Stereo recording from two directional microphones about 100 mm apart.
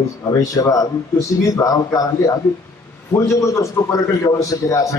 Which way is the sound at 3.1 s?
30° left (ahead or behind).